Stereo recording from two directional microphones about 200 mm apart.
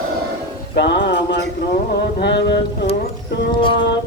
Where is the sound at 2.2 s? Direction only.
60° left (ahead or behind).